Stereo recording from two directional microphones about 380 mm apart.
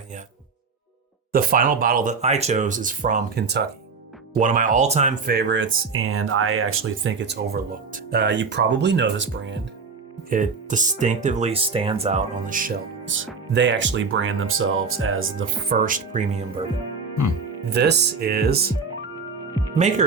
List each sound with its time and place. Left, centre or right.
1.3 s speech: right
17.7 s speech: right